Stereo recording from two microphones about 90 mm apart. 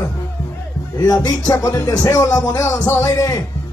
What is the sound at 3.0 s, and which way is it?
Speech, 40° left (ahead or behind).